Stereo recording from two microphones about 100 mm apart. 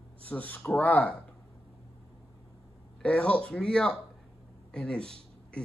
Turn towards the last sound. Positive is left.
turn(degrees=10)  # may be behind; listen again after turning